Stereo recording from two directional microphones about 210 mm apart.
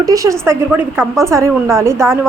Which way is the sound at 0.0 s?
15° right (ahead or behind).